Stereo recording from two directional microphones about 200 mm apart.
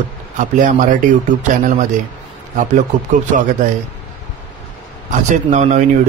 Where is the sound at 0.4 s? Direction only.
40° right (ahead or behind).